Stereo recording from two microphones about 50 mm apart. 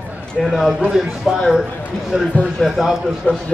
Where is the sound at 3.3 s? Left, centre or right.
Left.